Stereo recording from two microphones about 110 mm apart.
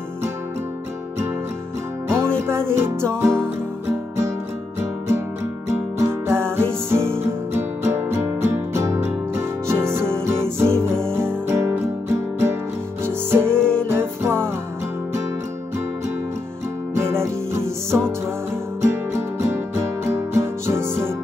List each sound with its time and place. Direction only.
2.0 s music: 25° right (ahead or behind)
5.7 s music: 25° right (ahead or behind)
13.0 s music: 20° right (ahead or behind)
13.6 s music: 10° left (ahead or behind)
13.8 s music: 20° right (ahead or behind)
16.9 s music: 25° right (ahead or behind)